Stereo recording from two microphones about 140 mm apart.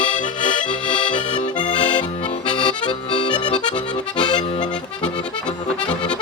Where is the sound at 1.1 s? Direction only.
35° left (ahead or behind).